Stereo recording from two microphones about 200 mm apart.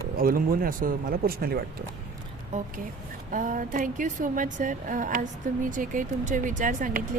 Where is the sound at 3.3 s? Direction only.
40° right (ahead or behind).